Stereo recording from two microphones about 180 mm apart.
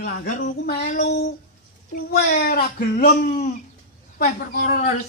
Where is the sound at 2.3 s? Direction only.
55° left (ahead or behind).